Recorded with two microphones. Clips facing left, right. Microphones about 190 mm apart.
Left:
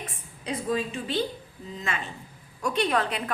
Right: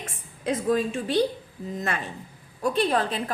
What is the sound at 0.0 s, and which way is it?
A woman's voice, 50° right (ahead or behind).